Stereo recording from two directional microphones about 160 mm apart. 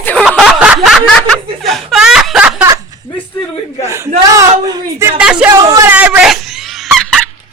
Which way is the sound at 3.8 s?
20° right (ahead or behind).